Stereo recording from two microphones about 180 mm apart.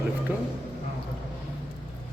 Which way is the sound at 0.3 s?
10° right (ahead or behind).